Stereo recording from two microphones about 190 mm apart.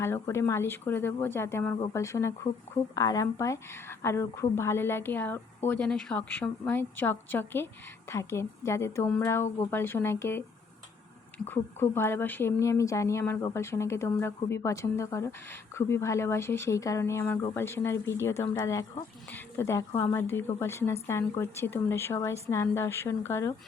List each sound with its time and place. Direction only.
0.0 s speech: 15° left (ahead or behind)
11.4 s speech: 10° left (ahead or behind)